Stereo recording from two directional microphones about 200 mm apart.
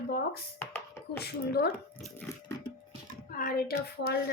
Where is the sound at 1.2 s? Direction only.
55° left (ahead or behind).